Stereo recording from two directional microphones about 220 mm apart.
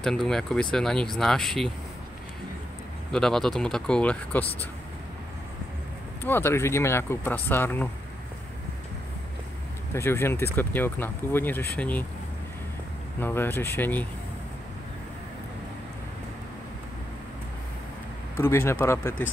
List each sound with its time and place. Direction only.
0.0 s speech: centre (ahead or behind)
3.1 s speech: 5° left (ahead or behind)
6.2 s speech: 10° left (ahead or behind)
9.9 s speech: 10° left (ahead or behind)
13.2 s speech: 10° left (ahead or behind)
18.3 s speech: 10° left (ahead or behind)